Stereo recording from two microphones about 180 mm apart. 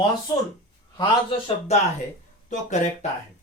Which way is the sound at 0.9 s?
35° left (ahead or behind).